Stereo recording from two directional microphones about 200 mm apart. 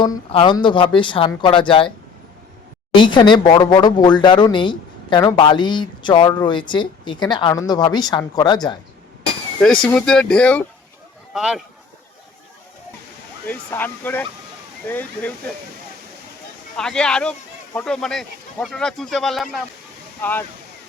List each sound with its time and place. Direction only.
0.0 s speech: 25° left (ahead or behind)
2.9 s speech: 25° left (ahead or behind)
9.8 s speech: 5° left (ahead or behind)
13.5 s speech: 10° left (ahead or behind)
16.7 s speech: 5° left (ahead or behind)